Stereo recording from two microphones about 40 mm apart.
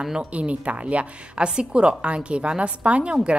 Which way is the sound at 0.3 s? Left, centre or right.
Right.